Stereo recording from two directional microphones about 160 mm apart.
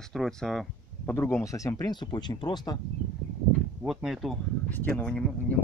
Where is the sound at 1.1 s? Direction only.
15° left (ahead or behind).